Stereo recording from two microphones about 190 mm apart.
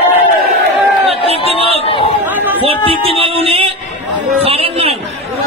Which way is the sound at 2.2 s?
10° right (ahead or behind).